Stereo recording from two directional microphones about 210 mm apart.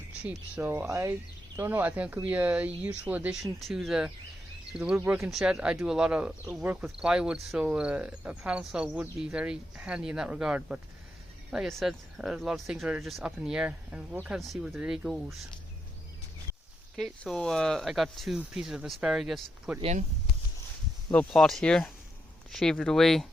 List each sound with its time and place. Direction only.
0.2 s speech: 5° right (ahead or behind)
17.0 s speech: centre (ahead or behind)
19.8 s speech: 35° right (ahead or behind)
21.1 s speech: 5° left (ahead or behind)